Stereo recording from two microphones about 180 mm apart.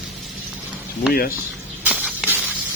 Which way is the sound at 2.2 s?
5° right (ahead or behind).